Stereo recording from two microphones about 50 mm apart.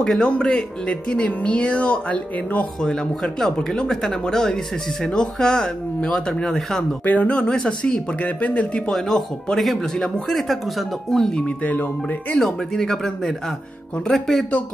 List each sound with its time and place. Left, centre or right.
0.2 s speech: left
2.9 s speech: centre
7.1 s speech: left
7.3 s speech: centre
8.9 s speech: centre
11.4 s speech: left
12.4 s speech: centre